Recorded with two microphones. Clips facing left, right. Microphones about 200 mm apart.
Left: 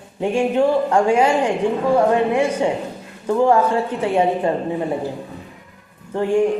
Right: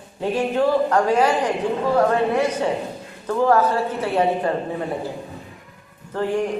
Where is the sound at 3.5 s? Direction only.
15° left (ahead or behind).